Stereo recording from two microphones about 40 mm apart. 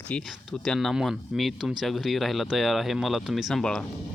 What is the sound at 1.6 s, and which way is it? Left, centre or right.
Speech, centre.